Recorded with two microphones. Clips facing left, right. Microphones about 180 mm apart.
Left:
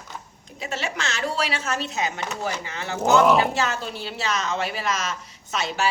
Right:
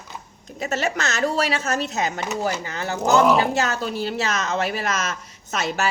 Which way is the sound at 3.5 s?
45° right (ahead or behind).